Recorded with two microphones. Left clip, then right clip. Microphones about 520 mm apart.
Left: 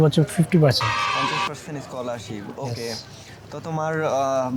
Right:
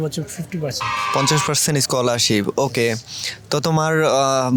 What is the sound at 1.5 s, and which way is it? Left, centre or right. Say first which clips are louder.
Speech: right 13 dB; right.